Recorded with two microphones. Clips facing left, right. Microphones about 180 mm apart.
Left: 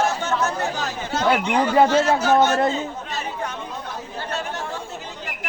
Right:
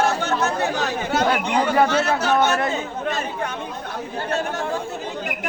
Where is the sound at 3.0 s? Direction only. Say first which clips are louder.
Right 4 dB; 55° right (ahead or behind).